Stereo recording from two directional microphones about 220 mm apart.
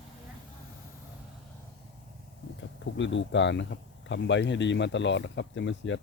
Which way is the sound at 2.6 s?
55° left (ahead or behind).